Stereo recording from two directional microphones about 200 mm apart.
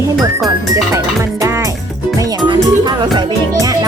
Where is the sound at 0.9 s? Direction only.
15° right (ahead or behind).